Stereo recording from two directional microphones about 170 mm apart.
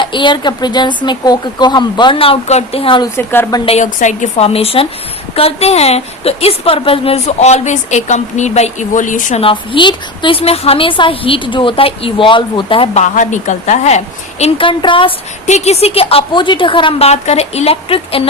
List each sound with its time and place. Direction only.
0.0 s speech: 30° left (ahead or behind)
3.2 s a woman's voice: 15° left (ahead or behind)
3.7 s a woman's voice: 45° left (ahead or behind)
9.4 s a woman's voice: 30° left (ahead or behind)
13.0 s a woman's voice: 45° left (ahead or behind); by 15.1 s 30° left (ahead or behind)
15.4 s a woman's voice: 40° left (ahead or behind)